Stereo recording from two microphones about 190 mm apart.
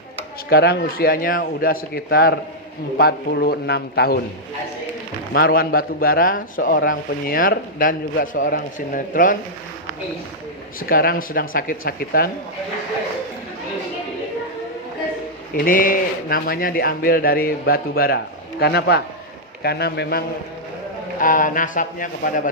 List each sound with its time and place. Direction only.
0.5 s a man's voice: 55° left (ahead or behind)
5.3 s speech: 50° left (ahead or behind)
10.8 s speech: 50° left (ahead or behind)
15.5 s a man's voice: 45° left (ahead or behind)
21.2 s speech: 45° left (ahead or behind)